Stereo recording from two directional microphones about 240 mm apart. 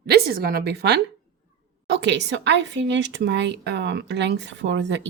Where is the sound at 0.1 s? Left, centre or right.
Right.